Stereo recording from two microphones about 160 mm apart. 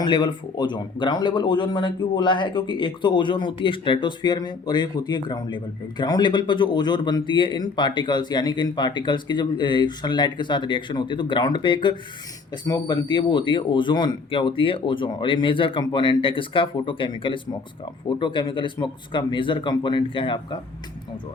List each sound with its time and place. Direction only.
0.0 s speech: 30° left (ahead or behind)